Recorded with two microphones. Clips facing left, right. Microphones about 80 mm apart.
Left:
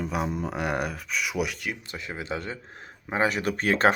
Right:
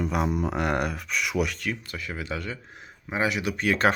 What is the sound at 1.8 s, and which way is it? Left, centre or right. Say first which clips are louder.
Speech: right 1 dB; left.